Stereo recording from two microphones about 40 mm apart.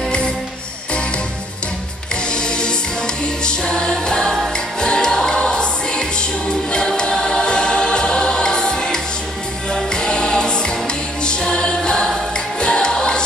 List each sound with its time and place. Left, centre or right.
2.3 s music: left
7.0 s choir: centre
9.9 s music: left